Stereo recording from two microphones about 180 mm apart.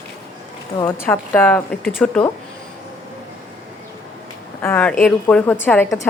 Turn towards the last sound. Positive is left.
turn(degrees=10)  # may be behind; listen again after turning